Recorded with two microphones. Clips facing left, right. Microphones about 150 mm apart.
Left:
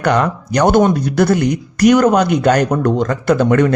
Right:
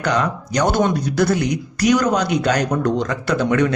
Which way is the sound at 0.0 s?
55° left (ahead or behind).